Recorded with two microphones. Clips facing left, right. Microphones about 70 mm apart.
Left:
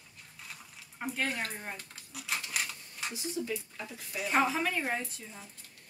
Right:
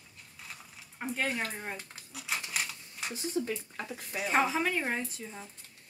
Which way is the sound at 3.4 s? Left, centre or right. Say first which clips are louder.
Right 5 dB; right.